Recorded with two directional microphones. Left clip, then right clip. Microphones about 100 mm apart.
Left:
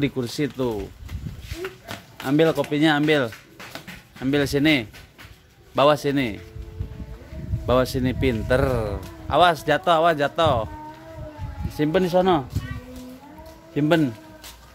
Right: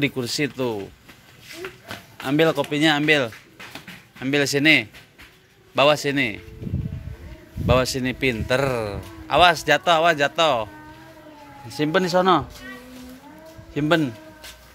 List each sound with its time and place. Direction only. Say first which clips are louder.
0.0 s speech: right 2 dB; 15° left (ahead or behind)
1.6 s a sound: left 2 dB; 30° right (ahead or behind)
2.2 s a man's voice: even; 15° left (ahead or behind); by 6.4 s 35° left (ahead or behind)
7.6 s a man's voice: right 1 dB; 30° left (ahead or behind)
11.7 s a man's voice: even; 35° left (ahead or behind)
13.7 s a man's voice: even; 40° left (ahead or behind)